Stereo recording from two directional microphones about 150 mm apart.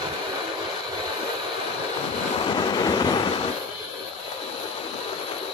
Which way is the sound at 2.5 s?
30° left (ahead or behind).